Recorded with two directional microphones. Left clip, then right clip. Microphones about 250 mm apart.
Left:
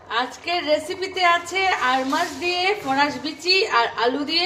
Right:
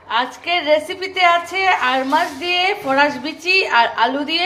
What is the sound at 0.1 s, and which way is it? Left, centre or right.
A woman's voice, centre.